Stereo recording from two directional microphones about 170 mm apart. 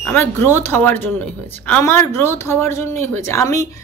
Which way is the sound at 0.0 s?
10° left (ahead or behind).